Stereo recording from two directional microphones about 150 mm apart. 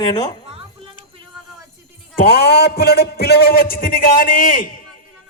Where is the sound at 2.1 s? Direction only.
90° left; by 5.0 s 65° left (ahead or behind).